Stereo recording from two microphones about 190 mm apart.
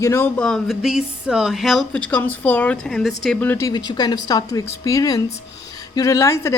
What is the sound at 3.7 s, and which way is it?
Speech, 20° left (ahead or behind).